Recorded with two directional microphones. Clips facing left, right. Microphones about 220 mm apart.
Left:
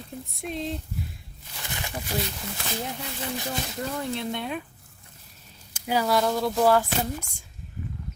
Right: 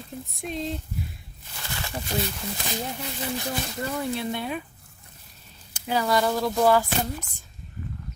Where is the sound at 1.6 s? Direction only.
20° left (ahead or behind).